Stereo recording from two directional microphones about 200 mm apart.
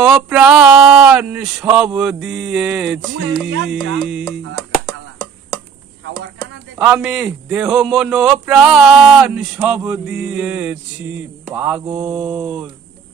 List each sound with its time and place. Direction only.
0.0 s a man's voice: 5° right (ahead or behind)
3.4 s music: 65° right (ahead or behind)
3.9 s a man's voice: centre (ahead or behind)
6.8 s a man's voice: 5° right (ahead or behind)
11.5 s mantra: 10° right (ahead or behind)